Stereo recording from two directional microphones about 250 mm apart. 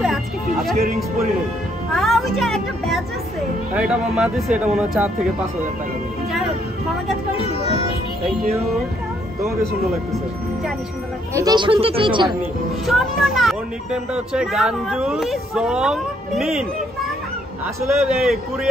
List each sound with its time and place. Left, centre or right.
0.0 s music: centre
2.0 s speech: centre
11.3 s speech: centre
12.8 s speech: centre
17.8 s speech: centre